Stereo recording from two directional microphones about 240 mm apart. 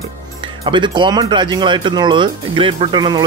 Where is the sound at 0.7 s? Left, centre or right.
Centre.